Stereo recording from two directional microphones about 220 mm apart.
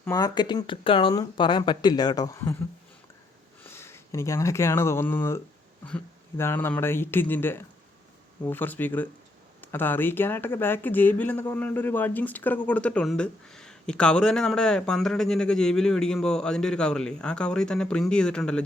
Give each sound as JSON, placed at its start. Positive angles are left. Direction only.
{"t": 0.0, "sound": "speech", "side_deg": 15}
{"t": 3.6, "sound": "speech", "side_deg": 10}